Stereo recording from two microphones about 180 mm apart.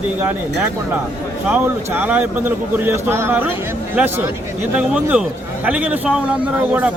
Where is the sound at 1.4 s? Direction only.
10° right (ahead or behind).